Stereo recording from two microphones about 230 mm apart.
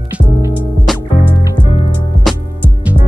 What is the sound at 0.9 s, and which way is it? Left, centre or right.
Music, centre.